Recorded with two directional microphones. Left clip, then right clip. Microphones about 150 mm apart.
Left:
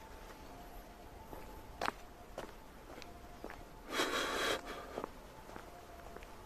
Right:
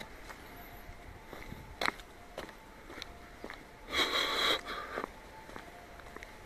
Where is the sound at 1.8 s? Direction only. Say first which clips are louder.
Right 5 dB; 90° right.